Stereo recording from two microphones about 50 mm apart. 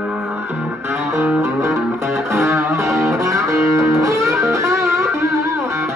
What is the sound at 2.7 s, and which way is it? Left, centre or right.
Music, right.